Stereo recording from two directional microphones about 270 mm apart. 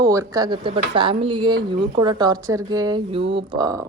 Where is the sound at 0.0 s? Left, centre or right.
Centre.